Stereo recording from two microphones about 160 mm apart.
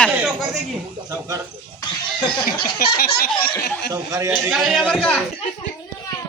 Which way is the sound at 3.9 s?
20° right (ahead or behind).